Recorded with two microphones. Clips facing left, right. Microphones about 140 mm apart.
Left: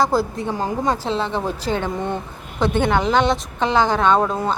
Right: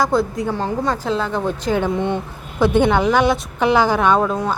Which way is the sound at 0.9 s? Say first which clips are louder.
Right 2 dB; 30° left (ahead or behind).